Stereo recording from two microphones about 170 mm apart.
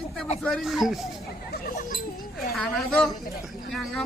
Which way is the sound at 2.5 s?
5° left (ahead or behind).